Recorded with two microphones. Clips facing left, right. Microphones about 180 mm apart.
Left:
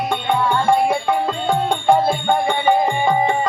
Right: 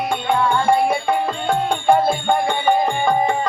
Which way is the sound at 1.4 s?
15° left (ahead or behind).